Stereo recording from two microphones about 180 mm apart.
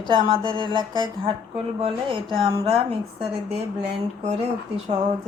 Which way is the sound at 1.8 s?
30° right (ahead or behind).